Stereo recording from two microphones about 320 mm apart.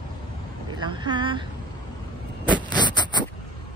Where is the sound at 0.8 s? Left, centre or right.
Centre.